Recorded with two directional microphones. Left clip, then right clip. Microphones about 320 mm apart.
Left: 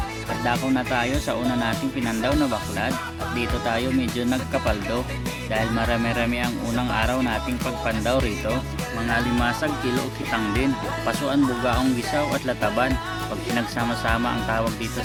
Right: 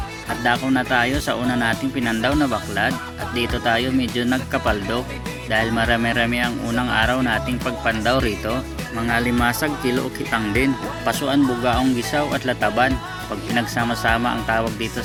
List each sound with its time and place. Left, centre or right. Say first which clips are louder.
0.4 s speech: right 4 dB; centre